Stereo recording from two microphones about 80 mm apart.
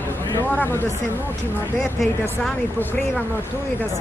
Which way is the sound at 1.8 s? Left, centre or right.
Centre.